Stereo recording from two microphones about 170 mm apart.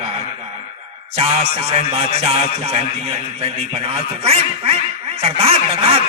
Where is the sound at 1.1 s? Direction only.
35° right (ahead or behind).